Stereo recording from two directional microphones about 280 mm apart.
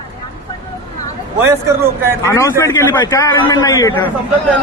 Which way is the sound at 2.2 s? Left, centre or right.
Centre.